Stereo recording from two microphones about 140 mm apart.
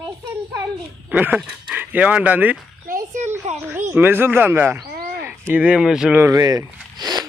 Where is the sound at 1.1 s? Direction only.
10° right (ahead or behind).